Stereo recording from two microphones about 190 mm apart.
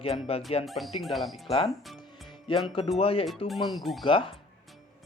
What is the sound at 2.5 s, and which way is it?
Speech, 25° left (ahead or behind).